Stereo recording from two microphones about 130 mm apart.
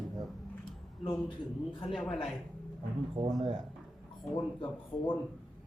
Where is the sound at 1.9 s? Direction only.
5° left (ahead or behind).